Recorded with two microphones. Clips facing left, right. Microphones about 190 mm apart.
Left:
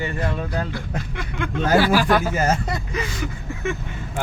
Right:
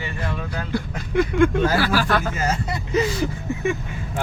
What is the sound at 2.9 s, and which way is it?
Speech, 30° right (ahead or behind).